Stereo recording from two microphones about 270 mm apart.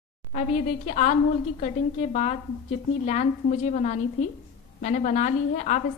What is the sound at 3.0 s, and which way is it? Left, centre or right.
A woman's voice, left.